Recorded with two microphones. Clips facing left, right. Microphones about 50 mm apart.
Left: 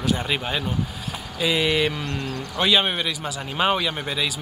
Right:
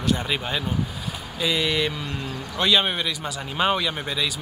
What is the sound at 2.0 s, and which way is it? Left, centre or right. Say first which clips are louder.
Speech: left 2 dB; left.